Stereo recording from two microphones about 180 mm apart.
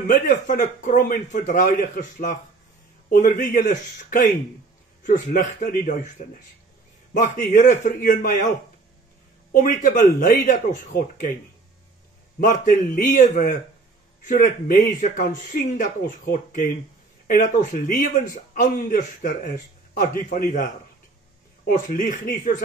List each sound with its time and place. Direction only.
0.0 s a man's voice: 45° left (ahead or behind)
5.0 s a man's voice: 45° left (ahead or behind)
7.2 s a man's voice: 45° left (ahead or behind)
9.5 s a man's voice: 45° left (ahead or behind)
12.4 s a man's voice: 50° left (ahead or behind)
21.6 s a man's voice: 50° left (ahead or behind)